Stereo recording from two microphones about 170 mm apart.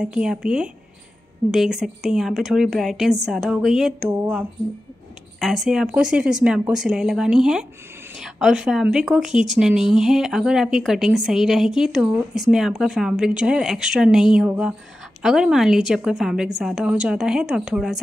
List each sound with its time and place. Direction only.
0.0 s speech: 5° right (ahead or behind)